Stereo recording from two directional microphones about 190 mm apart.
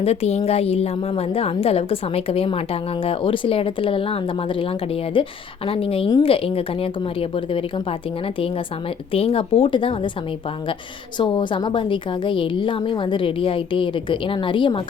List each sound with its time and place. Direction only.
0.0 s a woman's voice: 35° left (ahead or behind)
11.2 s a woman's voice: 25° left (ahead or behind)